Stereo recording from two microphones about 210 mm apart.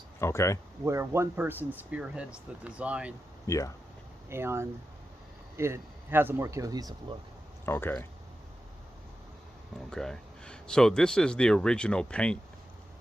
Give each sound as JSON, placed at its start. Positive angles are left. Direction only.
{"t": 0.2, "sound": "speech", "side_deg": 10}
{"t": 0.9, "sound": "speech", "side_deg": -10}
{"t": 3.4, "sound": "speech", "side_deg": 15}
{"t": 4.3, "sound": "speech", "side_deg": -10}
{"t": 7.6, "sound": "speech", "side_deg": 10}
{"t": 9.9, "sound": "speech", "side_deg": 5}